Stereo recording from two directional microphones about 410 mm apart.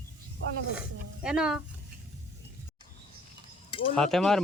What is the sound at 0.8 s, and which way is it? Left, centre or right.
Speech, centre.